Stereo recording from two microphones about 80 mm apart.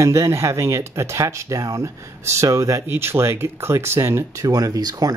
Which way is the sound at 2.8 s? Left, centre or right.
Right.